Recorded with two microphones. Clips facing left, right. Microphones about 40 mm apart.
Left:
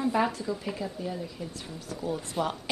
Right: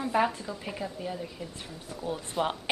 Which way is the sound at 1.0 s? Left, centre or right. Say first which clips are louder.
Left 1 dB; right.